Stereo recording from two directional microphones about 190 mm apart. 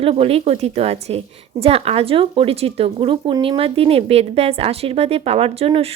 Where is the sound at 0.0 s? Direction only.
30° right (ahead or behind).